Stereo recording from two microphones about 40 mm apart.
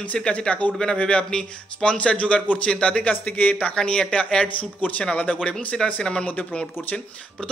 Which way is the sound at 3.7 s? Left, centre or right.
Left.